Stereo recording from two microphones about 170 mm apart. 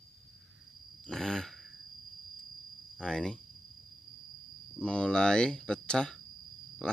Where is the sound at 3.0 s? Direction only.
5° left (ahead or behind).